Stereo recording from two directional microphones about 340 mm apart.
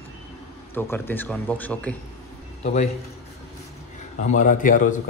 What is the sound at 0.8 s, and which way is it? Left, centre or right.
A man's voice, centre.